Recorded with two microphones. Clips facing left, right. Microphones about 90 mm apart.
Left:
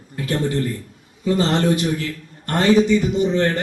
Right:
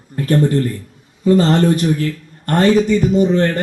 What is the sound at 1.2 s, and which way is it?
Speech, 40° right (ahead or behind).